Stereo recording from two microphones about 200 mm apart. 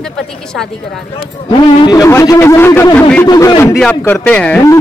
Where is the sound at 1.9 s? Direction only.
15° left (ahead or behind).